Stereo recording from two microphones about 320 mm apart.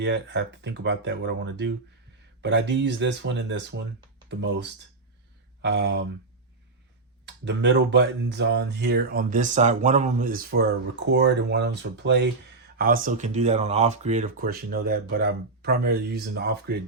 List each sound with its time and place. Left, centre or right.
0.0 s speech: right
7.3 s speech: right